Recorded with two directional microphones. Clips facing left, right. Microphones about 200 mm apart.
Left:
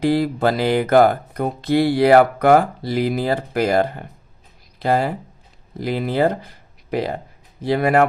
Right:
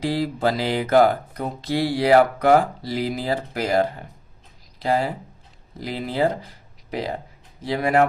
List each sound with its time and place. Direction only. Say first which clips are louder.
0.0 s speech: left 5 dB; 55° left (ahead or behind)
7.6 s speech: left 3 dB; 60° left (ahead or behind)